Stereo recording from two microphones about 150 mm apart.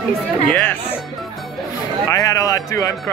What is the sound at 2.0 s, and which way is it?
Speech, 25° left (ahead or behind).